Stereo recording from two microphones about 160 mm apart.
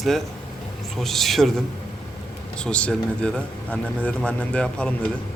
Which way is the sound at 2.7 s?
5° left (ahead or behind).